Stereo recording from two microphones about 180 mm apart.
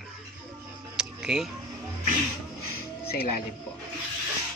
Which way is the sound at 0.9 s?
5° right (ahead or behind).